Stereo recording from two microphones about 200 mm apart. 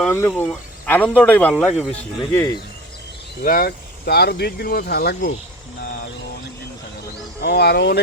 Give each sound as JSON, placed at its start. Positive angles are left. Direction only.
{"t": 0.0, "sound": "speech", "side_deg": 10}
{"t": 3.4, "sound": "speech", "side_deg": 45}
{"t": 5.8, "sound": "music", "side_deg": 45}
{"t": 7.4, "sound": "speech", "side_deg": 55}